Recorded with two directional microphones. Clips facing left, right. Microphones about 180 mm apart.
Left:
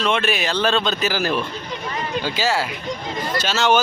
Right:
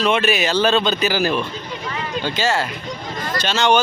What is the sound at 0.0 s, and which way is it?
A man's voice, 5° right (ahead or behind).